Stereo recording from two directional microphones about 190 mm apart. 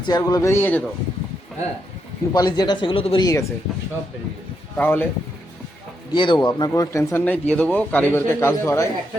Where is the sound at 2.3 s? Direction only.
20° left (ahead or behind).